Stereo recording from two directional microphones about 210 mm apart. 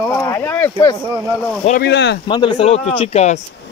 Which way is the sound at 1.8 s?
55° left (ahead or behind).